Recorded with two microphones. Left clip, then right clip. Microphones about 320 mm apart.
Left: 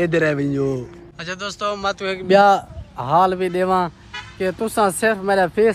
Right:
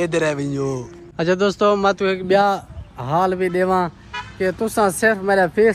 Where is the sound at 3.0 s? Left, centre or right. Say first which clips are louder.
Left 2 dB; centre.